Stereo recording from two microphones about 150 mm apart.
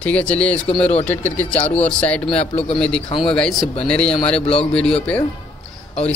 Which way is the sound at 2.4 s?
45° left (ahead or behind).